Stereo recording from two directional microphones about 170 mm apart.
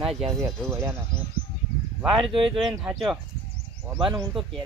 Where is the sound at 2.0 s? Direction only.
Centre (ahead or behind).